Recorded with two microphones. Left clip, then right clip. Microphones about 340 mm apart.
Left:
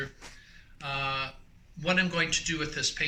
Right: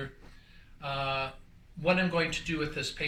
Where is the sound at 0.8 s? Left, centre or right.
Centre.